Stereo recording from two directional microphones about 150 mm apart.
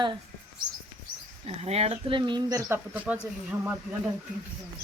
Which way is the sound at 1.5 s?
45° right (ahead or behind).